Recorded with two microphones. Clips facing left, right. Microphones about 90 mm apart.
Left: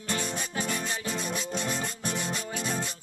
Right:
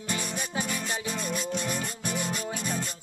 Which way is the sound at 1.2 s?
Centre (ahead or behind).